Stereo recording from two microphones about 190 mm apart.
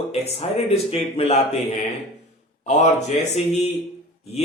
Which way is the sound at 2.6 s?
35° left (ahead or behind).